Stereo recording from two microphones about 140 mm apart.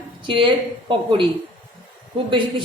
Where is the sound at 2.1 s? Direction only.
40° right (ahead or behind).